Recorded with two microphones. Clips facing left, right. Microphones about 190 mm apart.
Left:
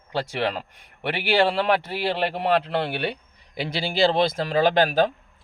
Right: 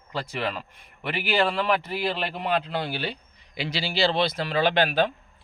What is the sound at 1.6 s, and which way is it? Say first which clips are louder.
Speech: left 2 dB; 65° left (ahead or behind).